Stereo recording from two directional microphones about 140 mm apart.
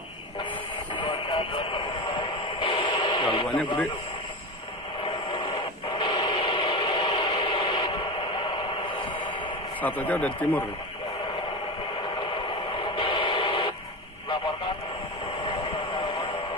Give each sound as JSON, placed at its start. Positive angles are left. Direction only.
{"t": 0.9, "sound": "radio", "side_deg": 35}
{"t": 5.0, "sound": "radio", "side_deg": 40}
{"t": 9.8, "sound": "speech", "side_deg": 10}
{"t": 12.2, "sound": "radio", "side_deg": 35}